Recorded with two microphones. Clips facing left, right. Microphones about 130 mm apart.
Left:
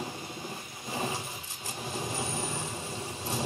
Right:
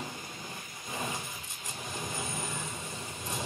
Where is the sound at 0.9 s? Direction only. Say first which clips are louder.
Left 4 dB; 30° left (ahead or behind).